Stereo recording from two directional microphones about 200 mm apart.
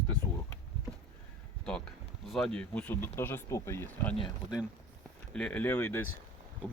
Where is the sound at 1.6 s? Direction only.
5° left (ahead or behind).